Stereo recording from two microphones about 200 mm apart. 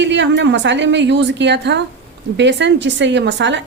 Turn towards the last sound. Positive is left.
turn(degrees=-60)  # may be behind; listen again after turning